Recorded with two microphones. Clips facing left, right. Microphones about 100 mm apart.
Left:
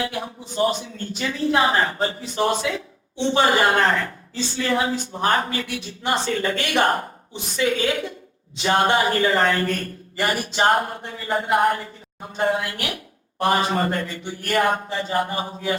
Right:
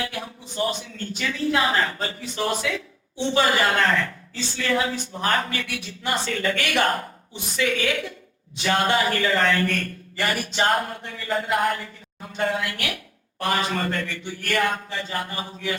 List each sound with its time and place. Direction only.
0.0 s speech: 30° left (ahead or behind)